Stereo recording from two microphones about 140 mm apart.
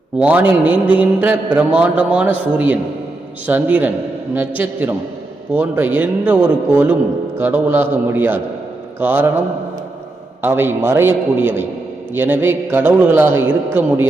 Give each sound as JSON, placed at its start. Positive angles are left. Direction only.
{"t": 0.2, "sound": "a man's voice", "side_deg": -10}
{"t": 3.4, "sound": "a man's voice", "side_deg": -10}
{"t": 10.4, "sound": "a man's voice", "side_deg": -15}